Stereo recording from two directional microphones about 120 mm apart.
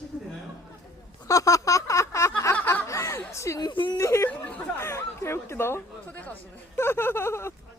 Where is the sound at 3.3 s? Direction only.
25° left (ahead or behind).